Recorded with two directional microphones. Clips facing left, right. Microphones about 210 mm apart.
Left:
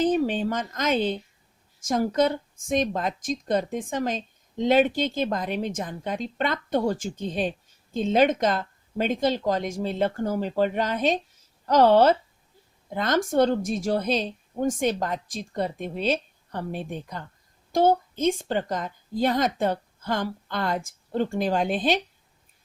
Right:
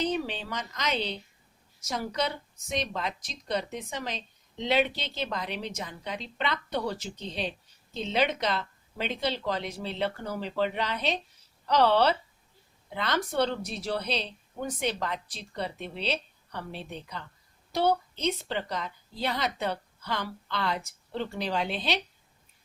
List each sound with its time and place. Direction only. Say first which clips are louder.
0.0 s a woman's voice: left 8 dB; 45° left (ahead or behind)